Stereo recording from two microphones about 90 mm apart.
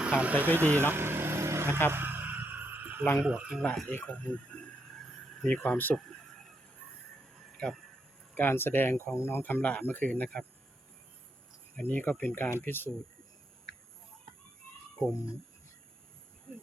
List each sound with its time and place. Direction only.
0.0 s speech: 10° right (ahead or behind); by 1.8 s 30° right (ahead or behind)
1.9 s a sound: 25° right (ahead or behind)
3.2 s speech: 10° right (ahead or behind)
3.6 s speech: 10° left (ahead or behind)
5.4 s speech: 5° left (ahead or behind)
5.7 s speech: 20° left (ahead or behind)
7.5 s a sound: 10° left (ahead or behind)
8.4 s speech: 25° left (ahead or behind); by 10.4 s 10° left (ahead or behind)
11.8 s speech: 20° left (ahead or behind)